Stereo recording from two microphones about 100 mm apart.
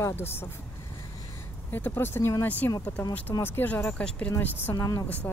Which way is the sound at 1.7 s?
20° left (ahead or behind).